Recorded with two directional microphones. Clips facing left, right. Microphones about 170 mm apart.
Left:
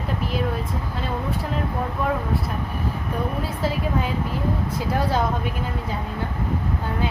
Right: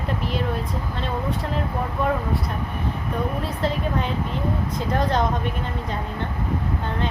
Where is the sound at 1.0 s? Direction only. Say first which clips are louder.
Right 1 dB; 5° left (ahead or behind).